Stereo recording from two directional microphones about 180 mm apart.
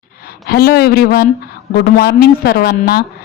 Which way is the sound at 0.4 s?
60° left (ahead or behind).